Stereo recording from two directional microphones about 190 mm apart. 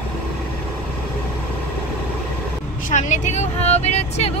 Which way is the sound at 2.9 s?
40° left (ahead or behind).